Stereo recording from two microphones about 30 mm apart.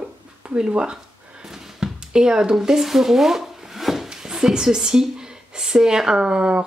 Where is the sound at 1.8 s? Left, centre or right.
Right.